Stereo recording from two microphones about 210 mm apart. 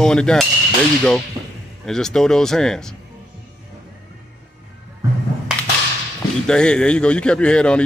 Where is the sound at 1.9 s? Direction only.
Centre (ahead or behind).